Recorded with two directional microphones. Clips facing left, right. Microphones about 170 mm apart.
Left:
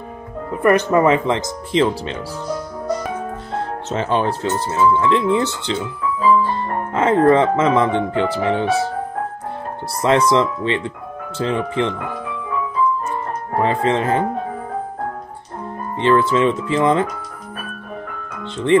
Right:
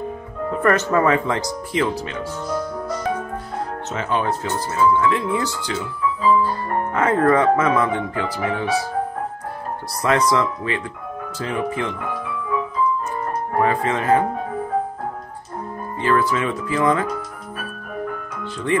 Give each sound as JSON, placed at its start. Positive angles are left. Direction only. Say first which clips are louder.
{"t": 0.5, "sound": "speech", "louder": "left 3 dB", "side_deg": 15}
{"t": 3.9, "sound": "speech", "louder": "left 4 dB", "side_deg": 30}
{"t": 10.0, "sound": "speech", "louder": "left 3 dB", "side_deg": 25}
{"t": 13.6, "sound": "speech", "louder": "left 3 dB", "side_deg": 25}
{"t": 16.0, "sound": "speech", "louder": "left 5 dB", "side_deg": 25}
{"t": 18.4, "sound": "music", "louder": "left 6 dB", "side_deg": 25}